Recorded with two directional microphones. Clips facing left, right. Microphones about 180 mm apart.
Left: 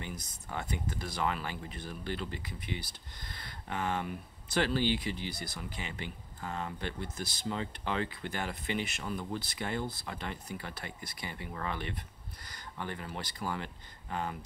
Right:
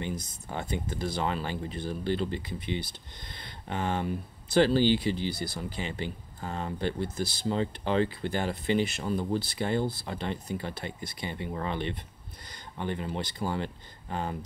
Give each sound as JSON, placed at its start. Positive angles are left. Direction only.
{"t": 0.0, "sound": "speech", "side_deg": -25}